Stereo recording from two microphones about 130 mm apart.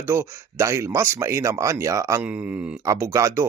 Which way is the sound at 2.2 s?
10° right (ahead or behind).